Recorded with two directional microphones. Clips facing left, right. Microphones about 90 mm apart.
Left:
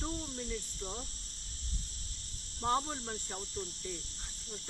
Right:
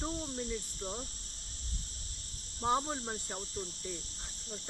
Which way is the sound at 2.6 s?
20° right (ahead or behind).